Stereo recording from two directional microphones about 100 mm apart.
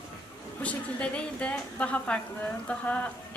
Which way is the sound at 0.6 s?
15° left (ahead or behind).